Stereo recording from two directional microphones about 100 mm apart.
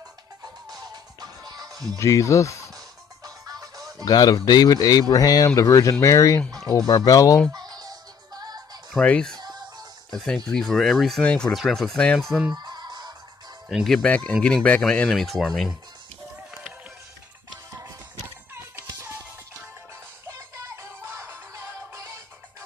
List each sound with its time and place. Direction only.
0.7 s music: 40° right (ahead or behind)
2.0 s speech: 30° left (ahead or behind)
3.3 s music: 40° right (ahead or behind)
4.0 s speech: 40° left (ahead or behind)
6.4 s a sound: 5° left (ahead or behind)
6.9 s speech: 40° left (ahead or behind)
7.5 s music: 40° right (ahead or behind)
8.9 s speech: 10° left (ahead or behind)
12.5 s fowl: 45° right (ahead or behind)
13.7 s speech: centre (ahead or behind)
14.0 s speech: 15° left (ahead or behind)
20.2 s music: 30° right (ahead or behind)